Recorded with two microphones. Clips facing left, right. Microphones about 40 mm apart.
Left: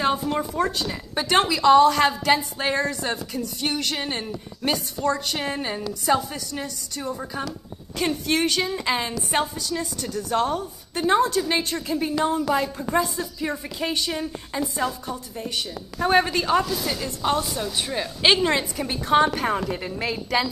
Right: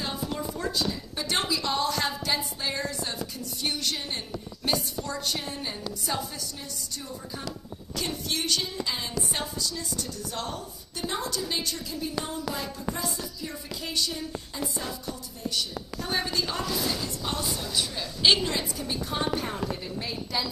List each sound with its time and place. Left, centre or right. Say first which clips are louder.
0.0 s a woman's voice: left 9 dB; left
8.0 s a woman's voice: left 9 dB; left
9.6 s a woman's voice: left 5 dB; left
18.5 s a woman's voice: left 6 dB; left
19.8 s a woman's voice: left 6 dB; left